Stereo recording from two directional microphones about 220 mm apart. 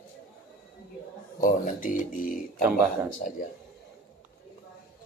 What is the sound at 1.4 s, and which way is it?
Speech, 35° left (ahead or behind).